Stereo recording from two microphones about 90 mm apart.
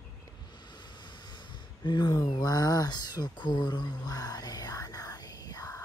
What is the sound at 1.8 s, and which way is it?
Speech, 55° left (ahead or behind).